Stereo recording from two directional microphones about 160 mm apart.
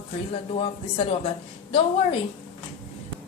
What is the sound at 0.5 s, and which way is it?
Speech, 35° left (ahead or behind).